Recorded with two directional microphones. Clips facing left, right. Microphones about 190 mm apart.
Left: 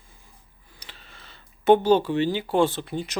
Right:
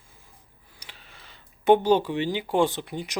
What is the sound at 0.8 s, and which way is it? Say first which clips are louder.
Speech: left 1 dB; 10° right (ahead or behind).